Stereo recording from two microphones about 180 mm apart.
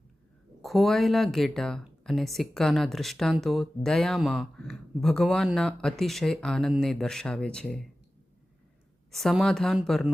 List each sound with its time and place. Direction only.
0.6 s speech: centre (ahead or behind)
9.1 s speech: centre (ahead or behind)